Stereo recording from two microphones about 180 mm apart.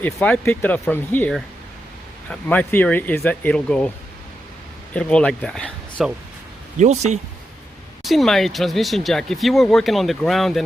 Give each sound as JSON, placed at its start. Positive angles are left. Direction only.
{"t": 0.0, "sound": "speech", "side_deg": 10}
{"t": 4.9, "sound": "speech", "side_deg": 5}
{"t": 6.7, "sound": "speech", "side_deg": -40}
{"t": 8.0, "sound": "speech", "side_deg": 0}